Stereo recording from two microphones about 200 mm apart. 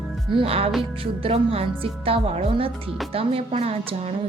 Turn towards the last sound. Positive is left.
turn(degrees=-30)  # may be behind; listen again after turning